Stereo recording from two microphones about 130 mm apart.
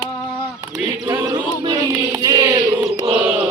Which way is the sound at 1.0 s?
25° right (ahead or behind).